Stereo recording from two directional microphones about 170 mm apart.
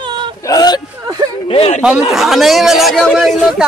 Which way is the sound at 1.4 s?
35° left (ahead or behind).